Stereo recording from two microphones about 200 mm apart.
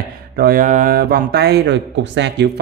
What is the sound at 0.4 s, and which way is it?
Speech, 45° right (ahead or behind).